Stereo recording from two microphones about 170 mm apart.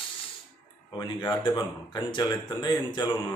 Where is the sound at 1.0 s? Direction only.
25° left (ahead or behind).